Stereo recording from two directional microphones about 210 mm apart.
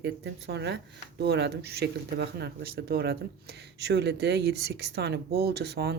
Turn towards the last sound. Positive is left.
turn(degrees=-50)  # may be behind; listen again after turning